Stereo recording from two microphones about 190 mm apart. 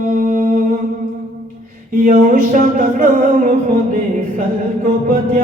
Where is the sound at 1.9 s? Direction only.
45° right (ahead or behind).